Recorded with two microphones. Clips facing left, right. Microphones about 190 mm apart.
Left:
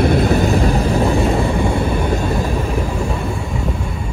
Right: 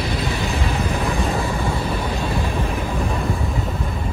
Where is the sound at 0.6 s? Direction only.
35° left (ahead or behind).